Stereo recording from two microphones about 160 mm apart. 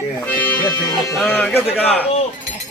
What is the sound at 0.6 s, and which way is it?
Speech, 25° left (ahead or behind).